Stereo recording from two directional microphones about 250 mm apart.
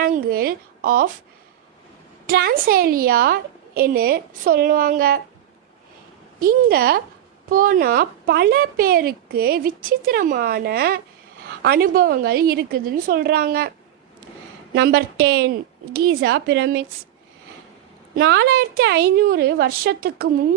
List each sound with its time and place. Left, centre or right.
0.0 s speech: right
2.2 s speech: right
6.4 s speech: right
14.8 s speech: right
18.1 s speech: right